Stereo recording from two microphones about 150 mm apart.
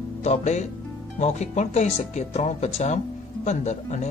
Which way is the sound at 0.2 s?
50° left (ahead or behind).